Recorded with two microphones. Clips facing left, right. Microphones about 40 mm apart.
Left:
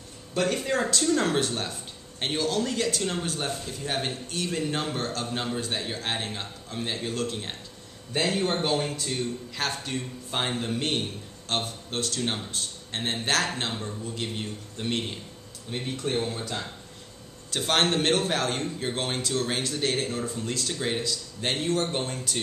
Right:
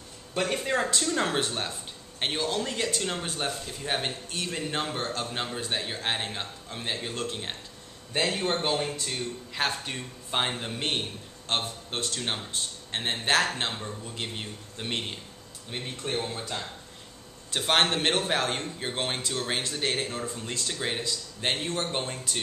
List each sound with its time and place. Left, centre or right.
0.3 s speech: centre